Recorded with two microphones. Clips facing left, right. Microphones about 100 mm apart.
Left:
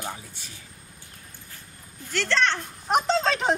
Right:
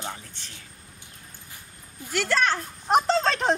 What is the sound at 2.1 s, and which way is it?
Speech, 10° right (ahead or behind).